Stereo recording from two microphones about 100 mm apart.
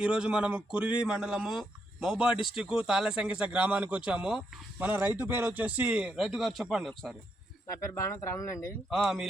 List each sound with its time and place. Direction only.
0.0 s speech: 10° right (ahead or behind)
4.8 s speech: 20° right (ahead or behind); by 7.2 s centre (ahead or behind)
7.7 s speech: 30° left (ahead or behind)
8.9 s speech: 5° right (ahead or behind)